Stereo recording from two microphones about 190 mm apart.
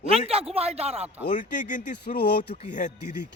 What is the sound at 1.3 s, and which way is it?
Speech, 40° left (ahead or behind).